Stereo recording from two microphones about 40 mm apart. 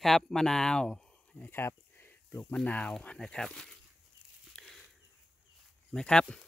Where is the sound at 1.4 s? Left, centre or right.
Left.